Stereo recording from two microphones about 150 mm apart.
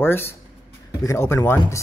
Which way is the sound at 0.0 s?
15° left (ahead or behind).